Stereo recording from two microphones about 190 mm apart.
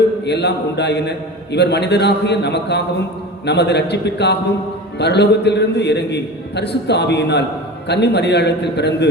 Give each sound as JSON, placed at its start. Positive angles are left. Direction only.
{"t": 0.3, "sound": "a man's voice", "side_deg": 65}